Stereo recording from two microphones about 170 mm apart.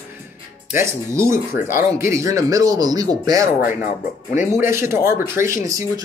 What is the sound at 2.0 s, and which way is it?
Speech, 15° right (ahead or behind).